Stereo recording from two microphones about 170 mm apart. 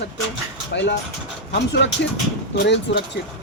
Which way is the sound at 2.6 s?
90° left.